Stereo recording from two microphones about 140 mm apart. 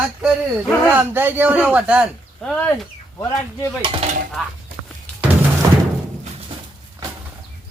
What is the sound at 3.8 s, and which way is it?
Dishes, 40° right (ahead or behind).